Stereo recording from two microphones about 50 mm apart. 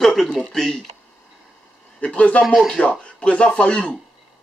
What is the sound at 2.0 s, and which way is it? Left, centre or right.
Speech, left.